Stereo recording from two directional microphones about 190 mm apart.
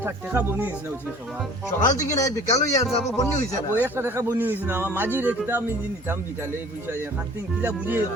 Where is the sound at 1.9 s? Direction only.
40° left (ahead or behind).